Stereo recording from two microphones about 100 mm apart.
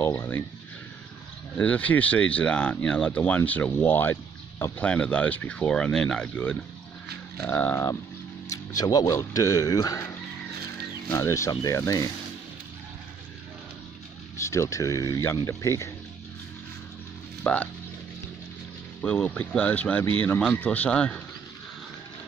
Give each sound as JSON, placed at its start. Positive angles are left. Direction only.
{"t": 0.0, "sound": "speech", "side_deg": 25}
{"t": 1.6, "sound": "speech", "side_deg": 15}
{"t": 4.8, "sound": "speech", "side_deg": 10}
{"t": 7.7, "sound": "a man's voice", "side_deg": 30}
{"t": 11.1, "sound": "a man's voice", "side_deg": 30}
{"t": 14.4, "sound": "a man's voice", "side_deg": 30}
{"t": 17.4, "sound": "speech", "side_deg": 15}
{"t": 18.9, "sound": "speech", "side_deg": 15}